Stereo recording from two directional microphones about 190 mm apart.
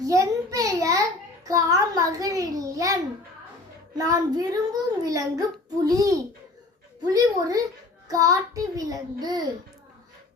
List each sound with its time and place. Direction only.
0.0 s a sound: 15° right (ahead or behind)
1.5 s a child's voice: 15° right (ahead or behind)
3.9 s child singing: 20° right (ahead or behind)